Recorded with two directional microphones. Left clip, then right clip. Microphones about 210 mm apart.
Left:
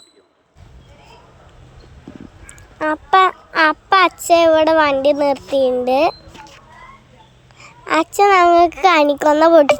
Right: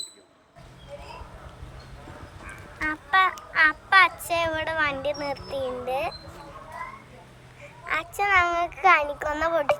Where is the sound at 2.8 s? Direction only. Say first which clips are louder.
Left 9 dB; 20° left (ahead or behind).